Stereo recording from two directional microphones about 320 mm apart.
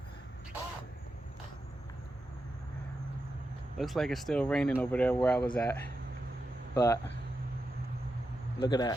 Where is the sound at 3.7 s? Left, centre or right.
Centre.